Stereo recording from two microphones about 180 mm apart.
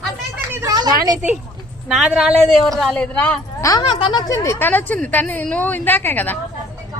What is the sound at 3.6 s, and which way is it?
A woman's voice, 20° left (ahead or behind).